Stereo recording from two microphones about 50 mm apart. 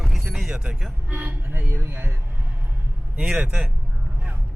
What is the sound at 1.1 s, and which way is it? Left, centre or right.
Speech, right.